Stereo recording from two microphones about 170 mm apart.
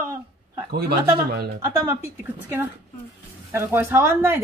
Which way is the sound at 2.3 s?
10° right (ahead or behind).